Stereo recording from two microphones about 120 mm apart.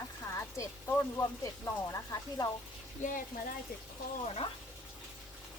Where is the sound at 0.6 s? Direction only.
25° left (ahead or behind).